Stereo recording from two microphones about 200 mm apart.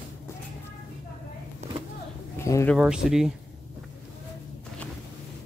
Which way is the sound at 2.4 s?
15° left (ahead or behind).